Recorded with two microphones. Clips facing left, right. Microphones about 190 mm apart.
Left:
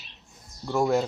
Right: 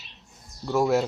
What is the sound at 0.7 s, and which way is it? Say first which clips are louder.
Speech: right 1 dB; 5° right (ahead or behind).